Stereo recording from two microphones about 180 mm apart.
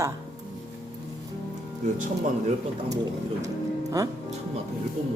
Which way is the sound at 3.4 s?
20° right (ahead or behind).